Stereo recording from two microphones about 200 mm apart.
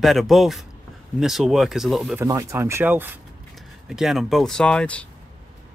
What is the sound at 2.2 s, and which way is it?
Speech, 15° right (ahead or behind).